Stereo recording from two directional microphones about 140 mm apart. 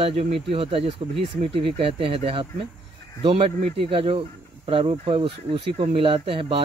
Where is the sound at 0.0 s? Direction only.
45° right (ahead or behind).